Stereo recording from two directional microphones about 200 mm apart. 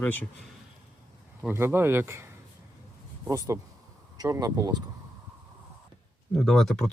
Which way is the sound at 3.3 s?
15° right (ahead or behind).